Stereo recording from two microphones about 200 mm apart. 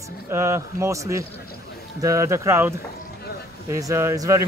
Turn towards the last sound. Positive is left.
turn(degrees=-15)  # may be behind; listen again after turning